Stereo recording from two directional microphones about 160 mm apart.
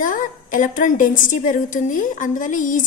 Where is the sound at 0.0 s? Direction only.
55° left (ahead or behind).